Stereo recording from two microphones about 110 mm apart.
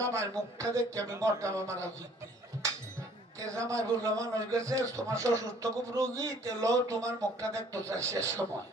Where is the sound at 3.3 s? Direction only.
30° right (ahead or behind).